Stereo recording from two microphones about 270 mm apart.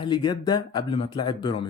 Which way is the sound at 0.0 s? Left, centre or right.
Centre.